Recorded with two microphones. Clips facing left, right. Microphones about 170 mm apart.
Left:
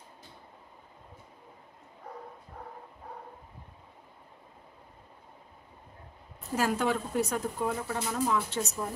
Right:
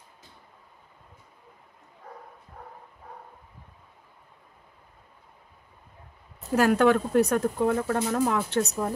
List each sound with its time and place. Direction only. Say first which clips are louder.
6.5 s speech: right 8 dB; 65° right (ahead or behind)